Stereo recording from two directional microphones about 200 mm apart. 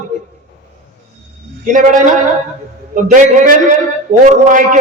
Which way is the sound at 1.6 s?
40° right (ahead or behind).